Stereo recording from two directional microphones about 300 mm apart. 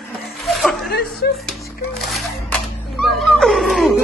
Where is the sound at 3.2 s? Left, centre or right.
Centre.